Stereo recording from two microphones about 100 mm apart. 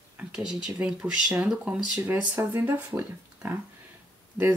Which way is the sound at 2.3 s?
25° right (ahead or behind).